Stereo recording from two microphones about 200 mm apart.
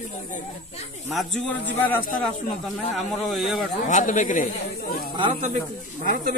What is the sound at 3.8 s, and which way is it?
Speech, 40° left (ahead or behind).